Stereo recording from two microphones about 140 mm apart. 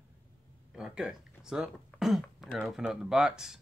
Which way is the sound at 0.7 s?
5° right (ahead or behind).